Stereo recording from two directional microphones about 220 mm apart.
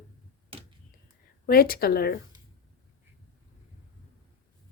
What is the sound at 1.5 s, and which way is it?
Speech, 45° left (ahead or behind).